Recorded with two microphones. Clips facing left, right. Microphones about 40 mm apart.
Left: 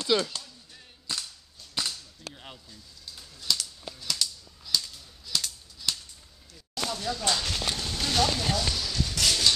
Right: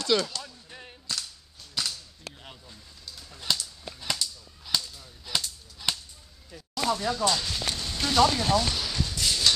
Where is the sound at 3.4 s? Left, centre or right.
Right.